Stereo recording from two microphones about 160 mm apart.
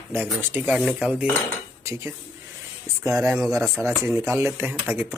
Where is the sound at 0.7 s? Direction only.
Centre (ahead or behind).